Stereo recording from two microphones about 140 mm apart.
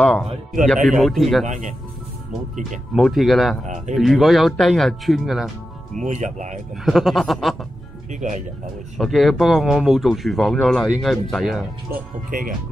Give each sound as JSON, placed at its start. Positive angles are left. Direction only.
{"t": 0.0, "sound": "speech", "side_deg": 5}
{"t": 1.4, "sound": "speech", "side_deg": -60}
{"t": 2.9, "sound": "speech", "side_deg": 0}
{"t": 3.6, "sound": "speech", "side_deg": -60}
{"t": 3.9, "sound": "speech", "side_deg": 0}
{"t": 6.0, "sound": "speech", "side_deg": -60}
{"t": 6.8, "sound": "speech", "side_deg": 0}
{"t": 8.1, "sound": "speech", "side_deg": -60}
{"t": 8.9, "sound": "speech", "side_deg": 0}
{"t": 12.3, "sound": "speech", "side_deg": -75}